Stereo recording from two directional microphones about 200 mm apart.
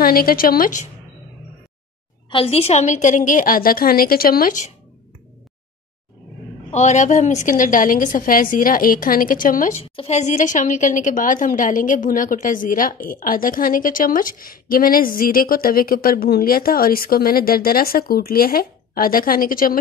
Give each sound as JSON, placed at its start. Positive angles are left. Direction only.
{"t": 0.0, "sound": "a woman's voice", "side_deg": 45}
{"t": 2.3, "sound": "a woman's voice", "side_deg": 30}
{"t": 6.7, "sound": "a woman's voice", "side_deg": 35}